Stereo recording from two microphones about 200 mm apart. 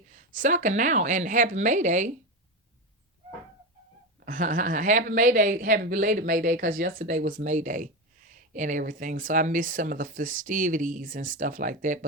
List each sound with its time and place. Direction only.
0.1 s speech: 40° right (ahead or behind)
4.3 s speech: 40° right (ahead or behind)